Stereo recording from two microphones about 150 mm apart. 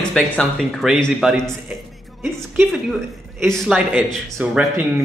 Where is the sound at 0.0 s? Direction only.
5° left (ahead or behind).